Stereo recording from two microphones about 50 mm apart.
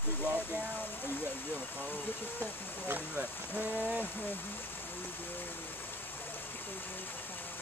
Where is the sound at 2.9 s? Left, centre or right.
Right.